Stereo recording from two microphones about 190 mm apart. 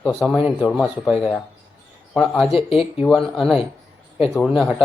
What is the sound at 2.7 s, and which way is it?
Speech, 30° left (ahead or behind).